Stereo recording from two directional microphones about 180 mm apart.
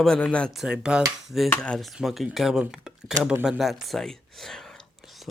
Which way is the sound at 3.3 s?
5° right (ahead or behind).